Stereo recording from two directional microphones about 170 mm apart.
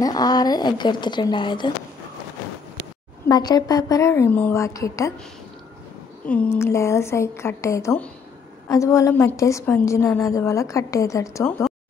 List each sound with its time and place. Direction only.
0.0 s a woman's voice: 25° left (ahead or behind)
3.3 s a woman's voice: 25° left (ahead or behind)
6.2 s a woman's voice: 5° left (ahead or behind)